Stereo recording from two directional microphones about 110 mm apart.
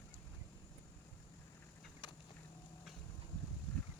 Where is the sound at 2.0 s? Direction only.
45° left (ahead or behind).